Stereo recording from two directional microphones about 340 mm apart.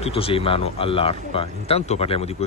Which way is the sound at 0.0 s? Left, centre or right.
Centre.